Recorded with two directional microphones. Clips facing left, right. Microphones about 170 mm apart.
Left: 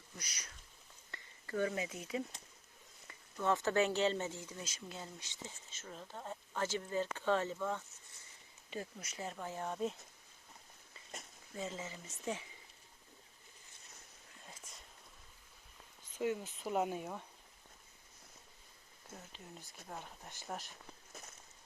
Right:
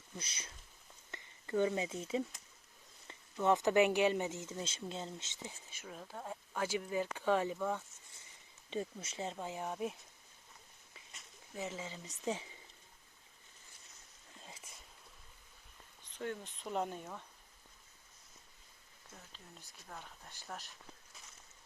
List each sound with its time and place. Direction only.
0.2 s speech: 25° right (ahead or behind)
3.4 s speech: 20° right (ahead or behind)
8.7 s speech: 25° right (ahead or behind); by 10.0 s 10° right (ahead or behind)
11.5 s speech: 15° right (ahead or behind)
12.2 s speech: 25° right (ahead or behind)
16.1 s speech: 10° left (ahead or behind)
19.9 s speech: 15° left (ahead or behind)